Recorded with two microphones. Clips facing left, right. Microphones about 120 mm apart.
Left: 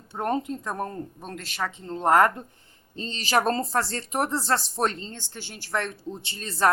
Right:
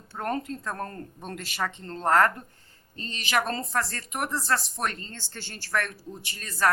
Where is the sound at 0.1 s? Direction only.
20° left (ahead or behind).